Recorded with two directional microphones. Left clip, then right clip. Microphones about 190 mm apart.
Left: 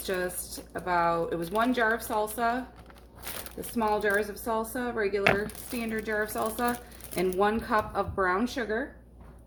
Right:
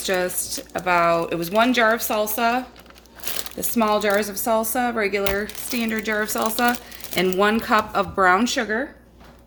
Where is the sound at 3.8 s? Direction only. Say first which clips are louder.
Right 7 dB; 50° right (ahead or behind).